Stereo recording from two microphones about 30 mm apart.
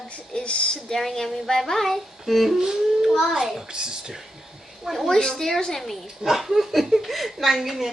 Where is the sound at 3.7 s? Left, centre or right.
Right.